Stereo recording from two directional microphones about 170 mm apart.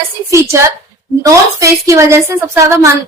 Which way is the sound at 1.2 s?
20° right (ahead or behind).